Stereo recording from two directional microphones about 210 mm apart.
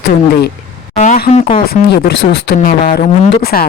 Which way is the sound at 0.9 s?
35° left (ahead or behind).